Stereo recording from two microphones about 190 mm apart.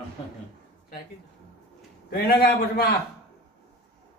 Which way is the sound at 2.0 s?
55° left (ahead or behind).